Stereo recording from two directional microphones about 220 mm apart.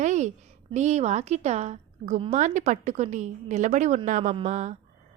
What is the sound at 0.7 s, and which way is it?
A woman's voice, 30° right (ahead or behind).